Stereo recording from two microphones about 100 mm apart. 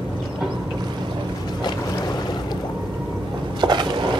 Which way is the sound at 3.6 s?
50° right (ahead or behind).